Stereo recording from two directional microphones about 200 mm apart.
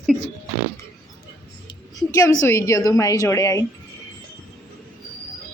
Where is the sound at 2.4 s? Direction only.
15° left (ahead or behind).